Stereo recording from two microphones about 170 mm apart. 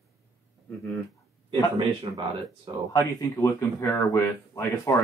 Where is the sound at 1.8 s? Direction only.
30° right (ahead or behind).